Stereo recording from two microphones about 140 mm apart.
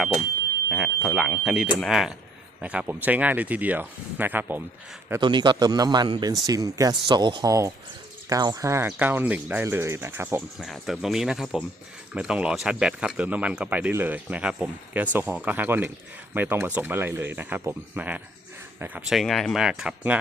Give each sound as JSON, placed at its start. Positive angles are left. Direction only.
{"t": 0.7, "sound": "speech", "side_deg": -5}
{"t": 5.2, "sound": "a man's voice", "side_deg": -35}
{"t": 10.6, "sound": "speech", "side_deg": 0}
{"t": 19.0, "sound": "speech", "side_deg": 0}